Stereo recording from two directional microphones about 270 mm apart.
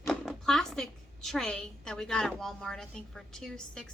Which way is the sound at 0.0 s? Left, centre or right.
Centre.